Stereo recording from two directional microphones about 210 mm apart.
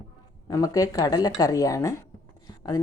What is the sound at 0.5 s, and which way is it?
Dishes, 15° left (ahead or behind).